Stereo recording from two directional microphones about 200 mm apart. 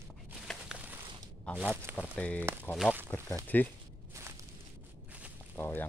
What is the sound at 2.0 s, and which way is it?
Speech, 5° left (ahead or behind).